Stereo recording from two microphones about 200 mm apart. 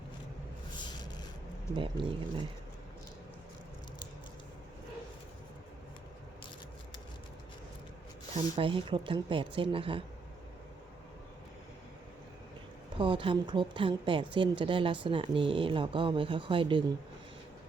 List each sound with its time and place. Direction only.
0.8 s a sound: 20° left (ahead or behind)
1.7 s speech: 25° right (ahead or behind)
8.5 s speech: 25° right (ahead or behind)
13.0 s speech: 25° right (ahead or behind)